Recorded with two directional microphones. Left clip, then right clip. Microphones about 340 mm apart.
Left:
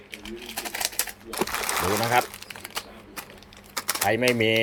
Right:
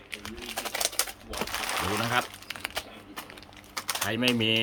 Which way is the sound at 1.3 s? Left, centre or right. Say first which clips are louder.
Left 4 dB; centre.